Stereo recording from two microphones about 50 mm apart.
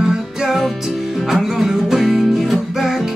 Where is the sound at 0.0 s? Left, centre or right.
Centre.